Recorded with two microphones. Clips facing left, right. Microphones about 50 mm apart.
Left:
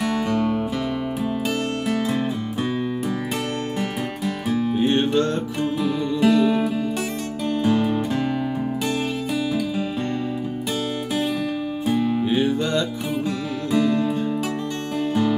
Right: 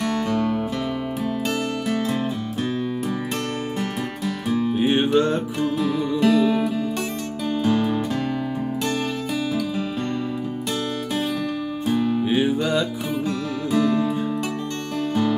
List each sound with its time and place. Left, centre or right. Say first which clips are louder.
0.0 s music: left 1 dB; centre
1.9 s music: left 1 dB; centre
4.5 s music: even; centre
5.6 s music: left 1 dB; centre
11.9 s music: even; centre
12.3 s music: even; centre